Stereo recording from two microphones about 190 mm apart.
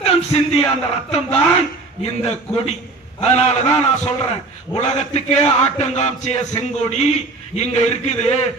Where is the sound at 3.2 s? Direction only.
35° left (ahead or behind).